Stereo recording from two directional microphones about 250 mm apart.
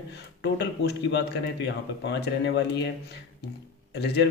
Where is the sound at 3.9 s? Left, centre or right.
Left.